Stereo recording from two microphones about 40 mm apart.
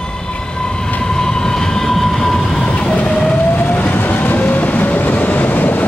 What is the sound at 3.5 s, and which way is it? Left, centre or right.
Train, left.